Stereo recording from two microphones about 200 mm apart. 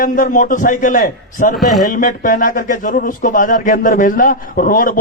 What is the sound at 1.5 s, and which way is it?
Speech, centre (ahead or behind).